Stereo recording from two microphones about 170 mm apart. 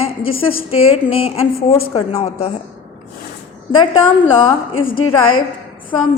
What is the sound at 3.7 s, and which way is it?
Speech, 30° left (ahead or behind).